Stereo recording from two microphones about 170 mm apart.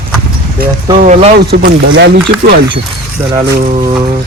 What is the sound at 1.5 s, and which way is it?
Speech, 80° right.